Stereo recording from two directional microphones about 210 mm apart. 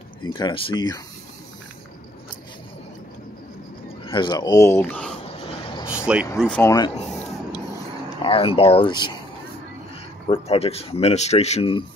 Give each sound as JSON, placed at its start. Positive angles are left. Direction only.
{"t": 0.2, "sound": "speech", "side_deg": 20}
{"t": 4.0, "sound": "speech", "side_deg": 25}
{"t": 5.5, "sound": "vehicle", "side_deg": 25}
{"t": 6.1, "sound": "speech", "side_deg": -5}
{"t": 6.4, "sound": "speech", "side_deg": 5}
{"t": 8.2, "sound": "speech", "side_deg": 25}
{"t": 10.2, "sound": "speech", "side_deg": 25}